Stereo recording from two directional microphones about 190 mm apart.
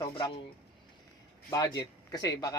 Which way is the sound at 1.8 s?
20° left (ahead or behind).